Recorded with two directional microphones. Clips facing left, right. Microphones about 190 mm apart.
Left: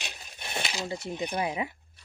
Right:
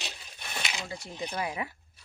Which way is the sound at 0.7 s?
35° left (ahead or behind).